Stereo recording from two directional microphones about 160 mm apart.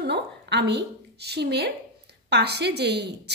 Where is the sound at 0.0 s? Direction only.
90° right.